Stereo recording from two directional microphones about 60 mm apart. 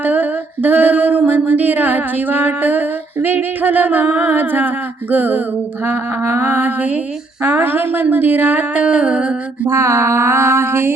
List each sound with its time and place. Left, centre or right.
0.0 s a sound: right
8.8 s music: centre
9.6 s mantra: right